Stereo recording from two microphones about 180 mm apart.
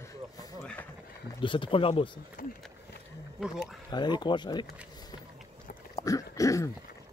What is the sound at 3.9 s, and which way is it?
Speech, 25° left (ahead or behind).